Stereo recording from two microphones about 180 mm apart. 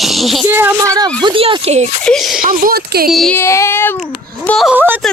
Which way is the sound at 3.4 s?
15° left (ahead or behind).